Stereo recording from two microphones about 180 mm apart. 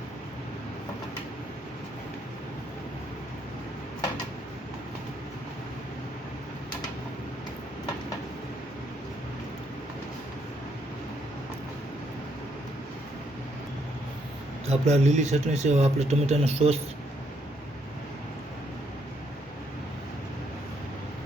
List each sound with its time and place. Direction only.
14.7 s speech: 40° right (ahead or behind)